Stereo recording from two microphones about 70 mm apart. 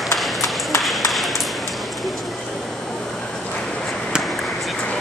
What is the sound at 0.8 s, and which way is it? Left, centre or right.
Ping, centre.